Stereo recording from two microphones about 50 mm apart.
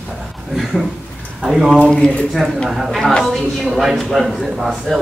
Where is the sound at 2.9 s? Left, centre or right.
Centre.